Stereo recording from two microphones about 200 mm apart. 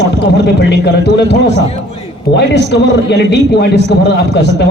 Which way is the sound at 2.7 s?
60° left (ahead or behind).